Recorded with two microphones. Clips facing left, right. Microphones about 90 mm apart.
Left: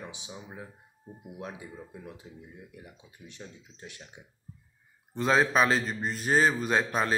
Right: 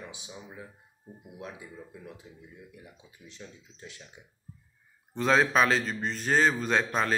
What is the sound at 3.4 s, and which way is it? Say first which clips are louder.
Speech: left 1 dB; 35° left (ahead or behind).